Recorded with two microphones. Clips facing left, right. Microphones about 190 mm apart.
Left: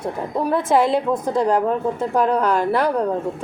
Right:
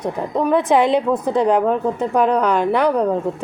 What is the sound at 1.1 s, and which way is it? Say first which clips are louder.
Speech: right 2 dB; 10° right (ahead or behind).